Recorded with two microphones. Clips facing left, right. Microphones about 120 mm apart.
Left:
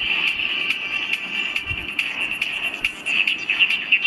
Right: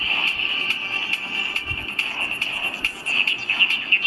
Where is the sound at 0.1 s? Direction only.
25° right (ahead or behind).